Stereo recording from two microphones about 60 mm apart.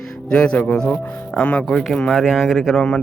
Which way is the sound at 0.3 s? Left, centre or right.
Centre.